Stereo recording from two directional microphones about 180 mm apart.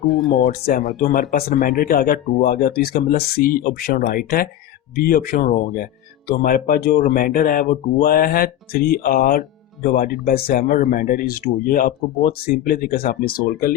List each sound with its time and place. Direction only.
0.0 s speech: centre (ahead or behind)
0.3 s speech: 55° left (ahead or behind)